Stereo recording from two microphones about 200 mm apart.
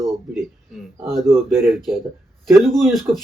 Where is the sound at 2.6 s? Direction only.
Centre (ahead or behind).